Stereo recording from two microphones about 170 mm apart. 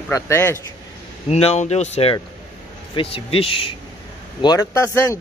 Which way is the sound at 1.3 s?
40° left (ahead or behind).